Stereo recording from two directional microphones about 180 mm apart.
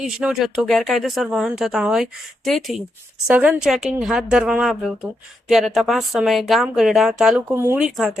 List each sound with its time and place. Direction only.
0.0 s speech: 5° right (ahead or behind)
7.9 s speech: centre (ahead or behind)